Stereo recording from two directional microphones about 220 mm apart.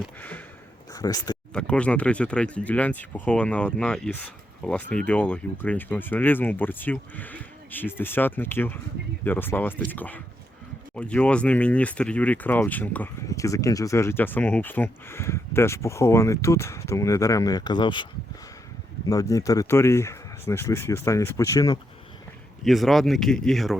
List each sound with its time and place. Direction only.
0.0 s speech: 5° left (ahead or behind)
1.5 s speech: 5° left (ahead or behind)
22.6 s speech: centre (ahead or behind)